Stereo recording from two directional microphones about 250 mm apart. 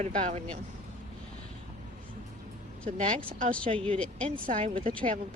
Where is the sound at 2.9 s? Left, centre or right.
Right.